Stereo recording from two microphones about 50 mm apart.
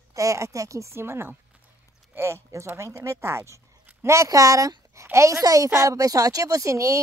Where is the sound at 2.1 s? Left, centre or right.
Right.